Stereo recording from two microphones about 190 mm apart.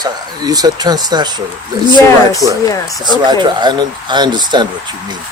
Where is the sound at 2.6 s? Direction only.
20° left (ahead or behind).